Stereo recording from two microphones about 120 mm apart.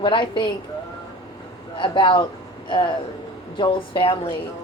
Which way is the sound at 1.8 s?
45° left (ahead or behind).